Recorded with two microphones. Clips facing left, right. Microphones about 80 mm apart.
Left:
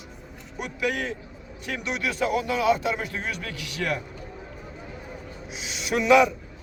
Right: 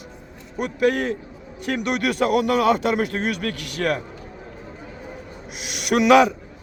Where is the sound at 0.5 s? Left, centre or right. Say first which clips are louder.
Right 8 dB; right.